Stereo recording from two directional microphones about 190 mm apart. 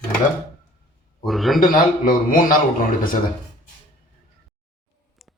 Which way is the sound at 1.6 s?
45° left (ahead or behind).